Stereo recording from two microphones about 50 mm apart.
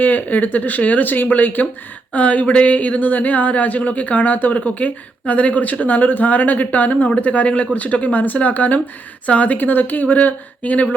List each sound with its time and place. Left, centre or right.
0.0 s speech: left